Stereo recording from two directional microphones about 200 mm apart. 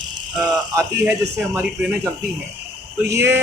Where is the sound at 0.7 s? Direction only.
15° right (ahead or behind).